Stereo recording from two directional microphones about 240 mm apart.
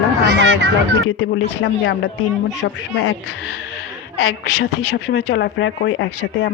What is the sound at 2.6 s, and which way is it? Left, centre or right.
Speech, left.